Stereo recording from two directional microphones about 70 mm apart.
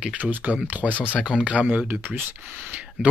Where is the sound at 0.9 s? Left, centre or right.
Left.